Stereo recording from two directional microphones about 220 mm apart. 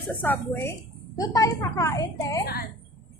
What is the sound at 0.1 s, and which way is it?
A woman's voice, 10° left (ahead or behind).